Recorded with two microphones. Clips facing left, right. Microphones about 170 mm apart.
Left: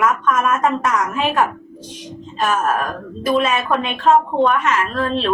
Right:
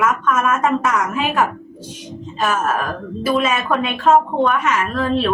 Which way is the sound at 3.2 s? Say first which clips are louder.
Left 1 dB; centre (ahead or behind).